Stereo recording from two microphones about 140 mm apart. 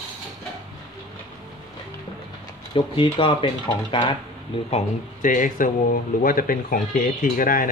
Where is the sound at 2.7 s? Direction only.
40° left (ahead or behind).